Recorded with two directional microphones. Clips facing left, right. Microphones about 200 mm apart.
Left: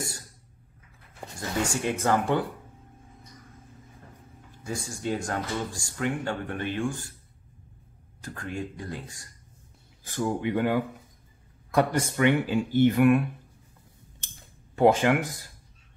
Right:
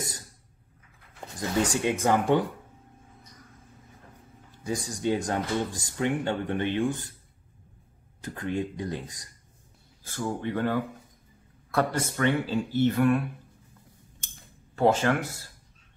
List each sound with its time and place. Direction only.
1.6 s speech: 20° right (ahead or behind)
4.6 s speech: 20° right (ahead or behind)
8.2 s speech: 20° right (ahead or behind)
10.0 s speech: 15° left (ahead or behind)
14.8 s speech: 15° left (ahead or behind)